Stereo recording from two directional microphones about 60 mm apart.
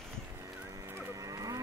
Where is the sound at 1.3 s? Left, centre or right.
Right.